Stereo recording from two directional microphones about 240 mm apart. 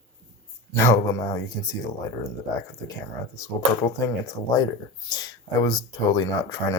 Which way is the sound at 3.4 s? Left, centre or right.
Centre.